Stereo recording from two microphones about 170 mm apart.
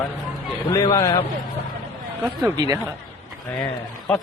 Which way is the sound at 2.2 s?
10° right (ahead or behind).